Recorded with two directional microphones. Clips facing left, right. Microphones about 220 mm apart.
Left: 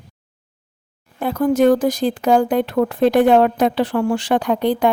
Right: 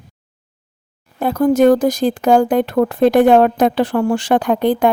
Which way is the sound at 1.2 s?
40° right (ahead or behind).